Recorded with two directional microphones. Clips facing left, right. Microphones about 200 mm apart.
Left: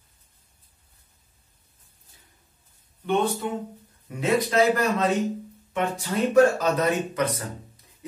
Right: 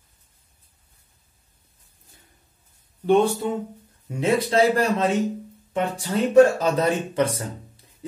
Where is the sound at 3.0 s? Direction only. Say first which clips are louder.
Right 6 dB; 35° right (ahead or behind).